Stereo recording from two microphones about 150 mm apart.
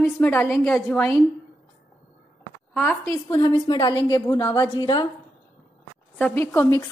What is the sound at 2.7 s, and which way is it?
Speech, 5° left (ahead or behind).